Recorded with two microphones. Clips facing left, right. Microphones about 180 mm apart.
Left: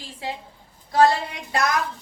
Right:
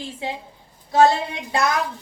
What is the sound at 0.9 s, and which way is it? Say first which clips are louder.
Speech: right 2 dB; 25° right (ahead or behind).